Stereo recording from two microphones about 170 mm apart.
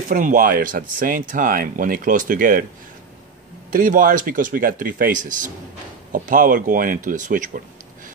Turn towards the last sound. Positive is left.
turn(degrees=-50)  # may be behind; listen again after turning